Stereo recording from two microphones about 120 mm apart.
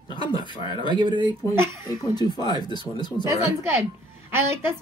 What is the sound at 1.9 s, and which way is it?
Speech, 35° left (ahead or behind).